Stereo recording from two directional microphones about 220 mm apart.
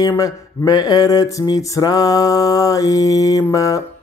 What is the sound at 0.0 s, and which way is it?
Speech, 15° left (ahead or behind).